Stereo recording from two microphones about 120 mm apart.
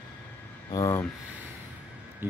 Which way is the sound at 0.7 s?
30° left (ahead or behind).